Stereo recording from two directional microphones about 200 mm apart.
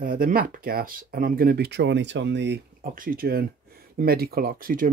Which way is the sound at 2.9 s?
45° right (ahead or behind).